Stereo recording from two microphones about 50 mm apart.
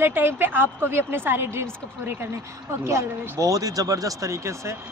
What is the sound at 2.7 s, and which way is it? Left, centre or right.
A woman's voice, right.